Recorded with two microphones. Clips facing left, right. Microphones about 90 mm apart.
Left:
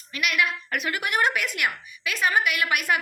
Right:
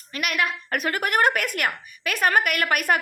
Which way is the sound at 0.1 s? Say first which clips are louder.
Even; 45° right (ahead or behind).